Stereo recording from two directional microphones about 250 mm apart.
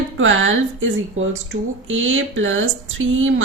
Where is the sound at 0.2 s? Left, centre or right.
Right.